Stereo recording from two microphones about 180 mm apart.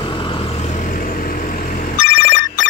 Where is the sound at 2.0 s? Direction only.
80° left.